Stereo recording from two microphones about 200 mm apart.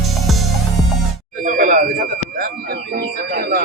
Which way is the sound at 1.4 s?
45° right (ahead or behind).